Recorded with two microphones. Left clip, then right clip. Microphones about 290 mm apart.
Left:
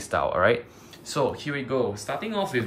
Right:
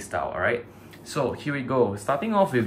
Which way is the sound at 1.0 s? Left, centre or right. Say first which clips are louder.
Left 1 dB; centre.